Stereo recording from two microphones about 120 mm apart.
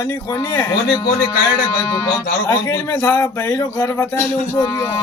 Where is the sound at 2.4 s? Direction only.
35° left (ahead or behind).